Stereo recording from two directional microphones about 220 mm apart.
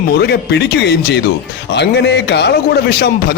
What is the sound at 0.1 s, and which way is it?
A man's voice, 50° left (ahead or behind).